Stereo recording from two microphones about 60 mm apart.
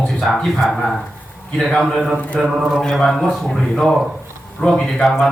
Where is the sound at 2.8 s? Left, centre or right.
Centre.